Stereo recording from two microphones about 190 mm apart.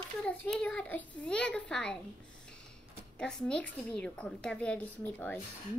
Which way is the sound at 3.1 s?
5° left (ahead or behind).